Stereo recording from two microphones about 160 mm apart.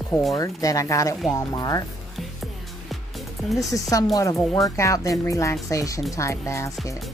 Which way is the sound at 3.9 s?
20° left (ahead or behind).